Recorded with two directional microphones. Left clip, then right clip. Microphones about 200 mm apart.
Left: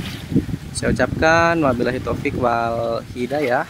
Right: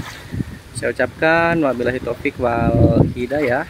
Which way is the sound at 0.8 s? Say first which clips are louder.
Even; 5° left (ahead or behind).